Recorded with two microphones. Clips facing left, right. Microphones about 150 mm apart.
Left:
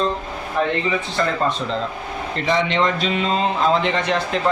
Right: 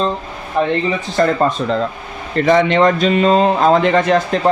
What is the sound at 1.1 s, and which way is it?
Speech, 45° right (ahead or behind).